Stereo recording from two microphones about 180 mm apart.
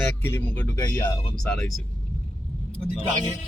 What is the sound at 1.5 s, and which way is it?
Speech, centre (ahead or behind).